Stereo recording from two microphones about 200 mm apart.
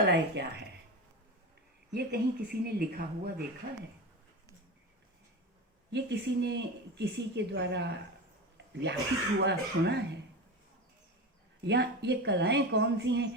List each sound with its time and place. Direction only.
0.0 s speech: 60° right (ahead or behind)
1.9 s speech: 55° right (ahead or behind)
5.9 s speech: 60° right (ahead or behind)
8.5 s a sound: 60° right (ahead or behind)
9.4 s speech: 60° right (ahead or behind)
11.6 s speech: 60° right (ahead or behind)